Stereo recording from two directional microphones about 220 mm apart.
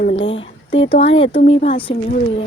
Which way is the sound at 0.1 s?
25° left (ahead or behind).